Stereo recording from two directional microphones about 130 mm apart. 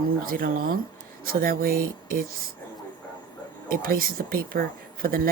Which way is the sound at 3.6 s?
90° right.